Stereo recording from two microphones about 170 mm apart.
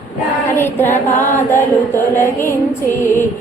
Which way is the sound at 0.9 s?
45° left (ahead or behind).